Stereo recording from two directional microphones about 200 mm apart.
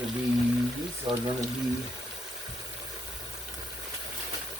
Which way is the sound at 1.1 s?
25° right (ahead or behind).